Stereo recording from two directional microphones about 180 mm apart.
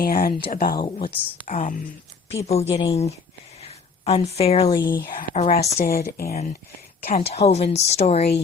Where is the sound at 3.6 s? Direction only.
35° left (ahead or behind).